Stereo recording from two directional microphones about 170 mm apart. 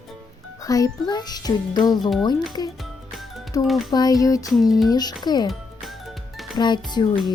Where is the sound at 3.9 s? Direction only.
25° left (ahead or behind).